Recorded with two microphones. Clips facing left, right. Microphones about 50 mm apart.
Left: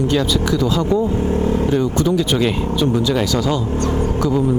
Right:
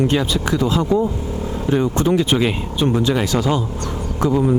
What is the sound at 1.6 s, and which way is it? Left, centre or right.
Speech, right.